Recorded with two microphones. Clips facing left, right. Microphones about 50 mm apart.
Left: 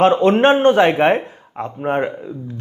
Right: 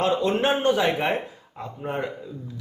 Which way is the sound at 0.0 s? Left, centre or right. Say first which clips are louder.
Left 10 dB; left.